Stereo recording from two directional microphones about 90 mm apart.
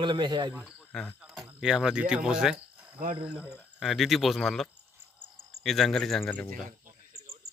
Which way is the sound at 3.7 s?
Centre (ahead or behind).